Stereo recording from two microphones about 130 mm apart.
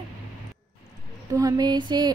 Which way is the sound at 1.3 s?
30° right (ahead or behind).